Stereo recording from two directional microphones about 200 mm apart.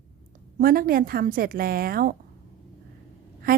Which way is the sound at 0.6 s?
45° right (ahead or behind).